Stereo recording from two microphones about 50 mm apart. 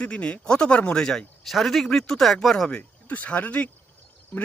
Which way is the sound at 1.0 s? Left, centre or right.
Centre.